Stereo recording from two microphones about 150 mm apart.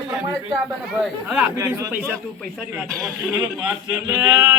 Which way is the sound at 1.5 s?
15° right (ahead or behind).